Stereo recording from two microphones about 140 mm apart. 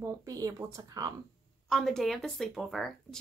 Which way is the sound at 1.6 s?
Centre (ahead or behind).